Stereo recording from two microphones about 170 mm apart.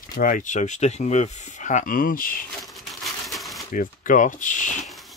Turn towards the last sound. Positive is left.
turn(degrees=0)  # may be behind; listen again after turning